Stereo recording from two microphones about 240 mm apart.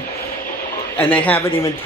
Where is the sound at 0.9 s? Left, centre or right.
Centre.